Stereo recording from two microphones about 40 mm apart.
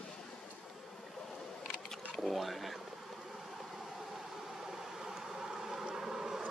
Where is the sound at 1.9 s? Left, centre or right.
Centre.